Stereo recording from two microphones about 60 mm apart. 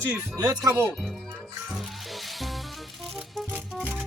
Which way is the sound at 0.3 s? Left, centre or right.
Right.